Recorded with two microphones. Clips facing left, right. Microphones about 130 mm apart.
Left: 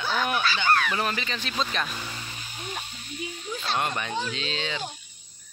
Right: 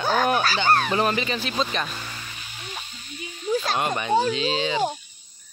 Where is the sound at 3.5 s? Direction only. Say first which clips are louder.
Right 7 dB; 40° right (ahead or behind).